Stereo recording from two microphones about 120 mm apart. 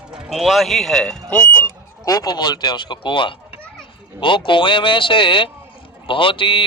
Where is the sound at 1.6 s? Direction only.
30° left (ahead or behind).